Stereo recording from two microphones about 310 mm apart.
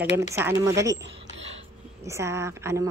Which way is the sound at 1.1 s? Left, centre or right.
Centre.